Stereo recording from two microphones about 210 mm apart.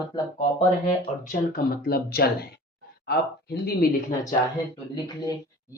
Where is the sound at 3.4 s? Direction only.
50° left (ahead or behind).